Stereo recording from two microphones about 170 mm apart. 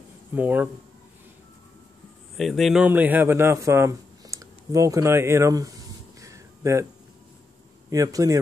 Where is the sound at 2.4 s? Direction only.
Centre (ahead or behind); by 5.7 s 20° right (ahead or behind).